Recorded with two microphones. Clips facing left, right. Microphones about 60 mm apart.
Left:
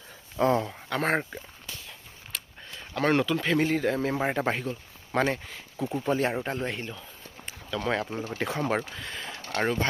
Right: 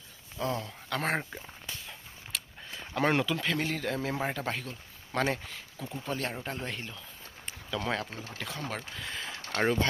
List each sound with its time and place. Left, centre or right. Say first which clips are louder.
0.3 s speech: left 9 dB; left
0.9 s speech: left 3 dB; centre
2.3 s speech: even; centre
4.2 s speech: left 6 dB; left
5.1 s speech: left 4 dB; centre
5.7 s speech: left 9 dB; left
6.6 s speech: left 6 dB; centre
7.9 s speech: left 6 dB; centre
8.4 s speech: left 9 dB; left
9.0 s speech: left 1 dB; centre